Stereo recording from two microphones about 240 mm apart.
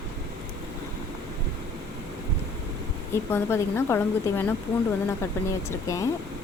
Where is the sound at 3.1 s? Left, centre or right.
Centre.